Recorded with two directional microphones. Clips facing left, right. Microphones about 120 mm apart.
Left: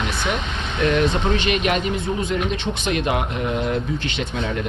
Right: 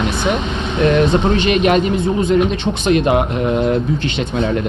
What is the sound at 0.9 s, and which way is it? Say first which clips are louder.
Speech: right 6 dB; 30° right (ahead or behind).